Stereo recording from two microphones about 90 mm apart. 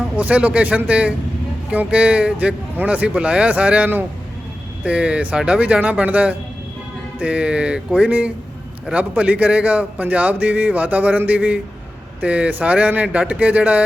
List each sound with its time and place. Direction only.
0.2 s speech: 15° right (ahead or behind)